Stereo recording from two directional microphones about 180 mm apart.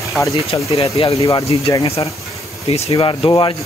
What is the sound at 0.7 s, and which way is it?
Speech, 35° left (ahead or behind).